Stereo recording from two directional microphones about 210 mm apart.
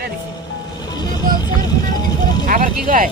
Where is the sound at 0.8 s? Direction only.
20° left (ahead or behind).